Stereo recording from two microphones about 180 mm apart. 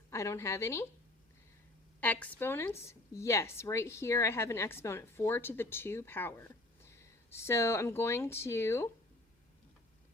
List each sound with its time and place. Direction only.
0.1 s speech: 15° left (ahead or behind)
2.0 s speech: 10° left (ahead or behind)